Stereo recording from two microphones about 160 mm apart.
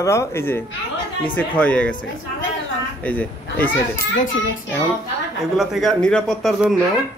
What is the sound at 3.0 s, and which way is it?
Speech, 10° left (ahead or behind).